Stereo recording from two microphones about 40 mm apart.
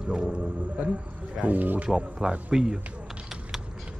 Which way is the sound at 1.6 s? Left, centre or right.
Right.